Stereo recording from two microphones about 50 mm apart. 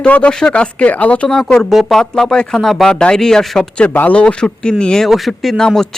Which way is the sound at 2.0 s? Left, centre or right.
Centre.